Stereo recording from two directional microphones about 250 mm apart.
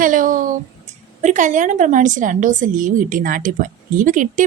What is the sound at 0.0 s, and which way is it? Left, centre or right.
A woman's voice, right.